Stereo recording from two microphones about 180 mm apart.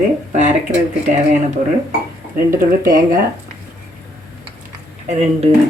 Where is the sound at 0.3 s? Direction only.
40° right (ahead or behind).